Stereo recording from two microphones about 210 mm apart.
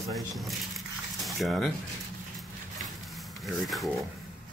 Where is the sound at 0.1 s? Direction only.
Centre (ahead or behind).